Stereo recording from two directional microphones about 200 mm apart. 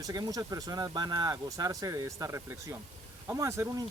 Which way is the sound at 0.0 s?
15° right (ahead or behind).